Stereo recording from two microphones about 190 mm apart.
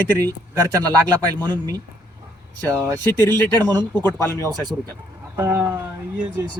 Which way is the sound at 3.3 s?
20° right (ahead or behind).